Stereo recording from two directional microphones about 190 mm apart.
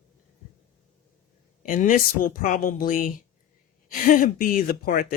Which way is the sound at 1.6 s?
45° left (ahead or behind).